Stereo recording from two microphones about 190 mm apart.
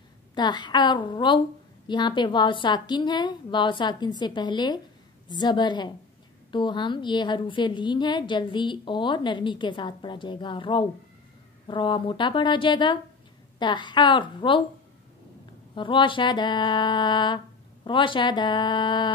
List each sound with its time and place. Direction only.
0.3 s a woman's voice: 25° left (ahead or behind)
15.7 s a woman's voice: 25° left (ahead or behind)